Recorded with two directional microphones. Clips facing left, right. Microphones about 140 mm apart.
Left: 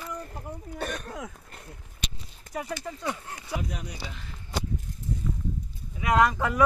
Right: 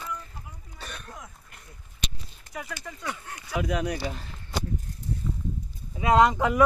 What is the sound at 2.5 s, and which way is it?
Speech, 30° left (ahead or behind).